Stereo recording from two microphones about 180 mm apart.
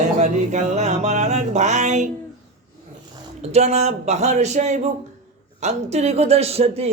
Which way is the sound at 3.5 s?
35° right (ahead or behind).